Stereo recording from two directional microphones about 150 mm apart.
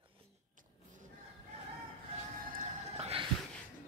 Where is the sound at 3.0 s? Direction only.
40° right (ahead or behind).